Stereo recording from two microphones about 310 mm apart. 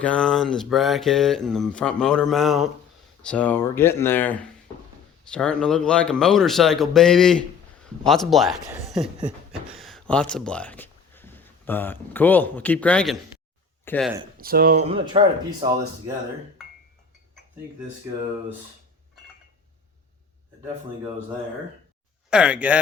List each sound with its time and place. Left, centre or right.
0.0 s speech: centre
14.3 s speech: right
22.3 s speech: centre